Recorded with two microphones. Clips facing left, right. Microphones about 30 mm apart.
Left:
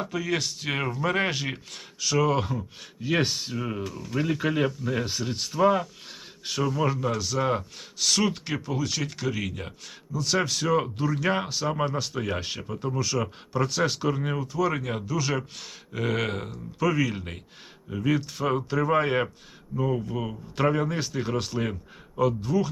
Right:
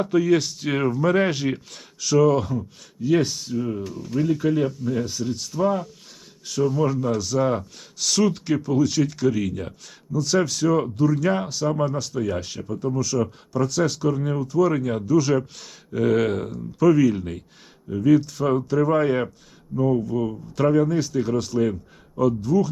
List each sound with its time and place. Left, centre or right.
0.2 s speech: centre
0.8 s speech: centre